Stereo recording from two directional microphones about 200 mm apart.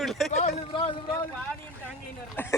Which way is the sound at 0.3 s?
35° left (ahead or behind).